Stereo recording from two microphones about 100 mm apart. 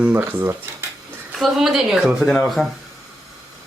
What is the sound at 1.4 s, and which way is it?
Speech, 5° right (ahead or behind).